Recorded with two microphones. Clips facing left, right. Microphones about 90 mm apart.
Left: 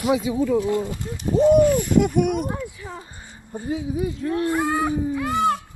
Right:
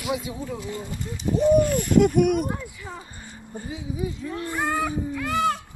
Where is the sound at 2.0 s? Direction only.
20° left (ahead or behind).